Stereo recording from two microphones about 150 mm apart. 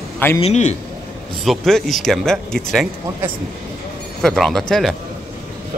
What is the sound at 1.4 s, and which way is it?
Speech, centre (ahead or behind).